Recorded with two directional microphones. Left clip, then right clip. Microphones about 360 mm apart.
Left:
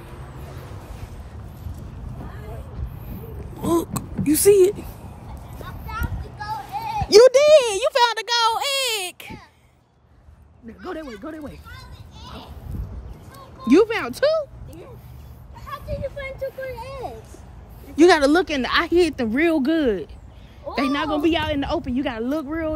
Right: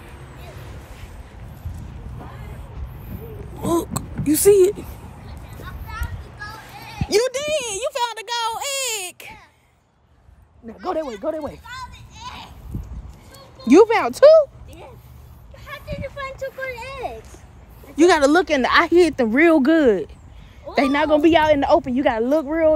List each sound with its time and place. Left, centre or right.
3.6 s a sound: centre
5.7 s a sound: left; by 9.3 s centre
10.8 s a woman's voice: centre
13.7 s speech: centre
16.0 s speech: right
17.9 s a woman's voice: centre